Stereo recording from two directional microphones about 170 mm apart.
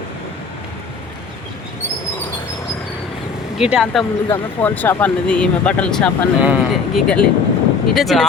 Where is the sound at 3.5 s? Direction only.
5° right (ahead or behind).